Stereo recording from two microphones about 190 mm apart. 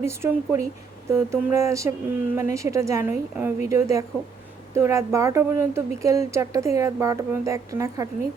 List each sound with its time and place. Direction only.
0.0 s speech: 15° right (ahead or behind)